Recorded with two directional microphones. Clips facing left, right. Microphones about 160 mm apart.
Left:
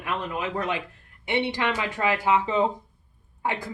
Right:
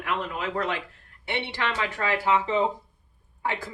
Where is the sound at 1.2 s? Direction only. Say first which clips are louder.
Left 4 dB; 15° left (ahead or behind).